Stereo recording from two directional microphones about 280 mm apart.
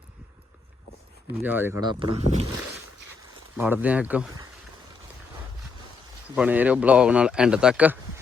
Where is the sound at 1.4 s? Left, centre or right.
Centre.